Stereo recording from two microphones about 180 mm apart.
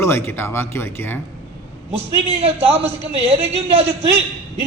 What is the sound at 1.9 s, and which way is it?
A man's voice, 35° right (ahead or behind).